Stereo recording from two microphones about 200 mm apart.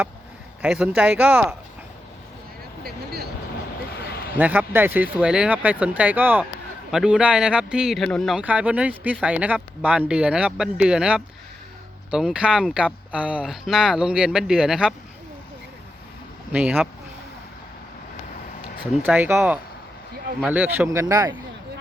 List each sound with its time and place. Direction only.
0.6 s speech: 5° right (ahead or behind)
3.9 s a sound: 55° left (ahead or behind)
4.4 s speech: 10° right (ahead or behind)
16.5 s speech: 5° right (ahead or behind)
19.0 s speech: 10° right (ahead or behind)